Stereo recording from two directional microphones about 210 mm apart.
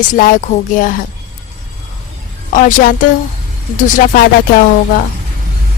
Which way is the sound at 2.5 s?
40° left (ahead or behind).